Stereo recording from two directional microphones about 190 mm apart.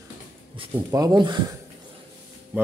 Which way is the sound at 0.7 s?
20° right (ahead or behind).